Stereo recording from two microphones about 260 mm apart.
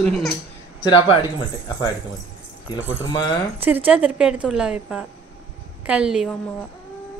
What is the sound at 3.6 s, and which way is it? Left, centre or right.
A woman's voice, centre.